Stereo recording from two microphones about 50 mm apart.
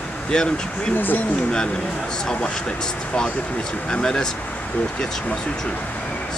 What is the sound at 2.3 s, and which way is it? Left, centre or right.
Speech, centre.